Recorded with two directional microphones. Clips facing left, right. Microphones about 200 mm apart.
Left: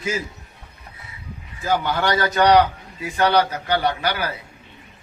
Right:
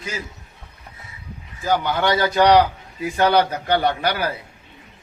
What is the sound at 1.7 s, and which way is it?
Speech, 15° right (ahead or behind).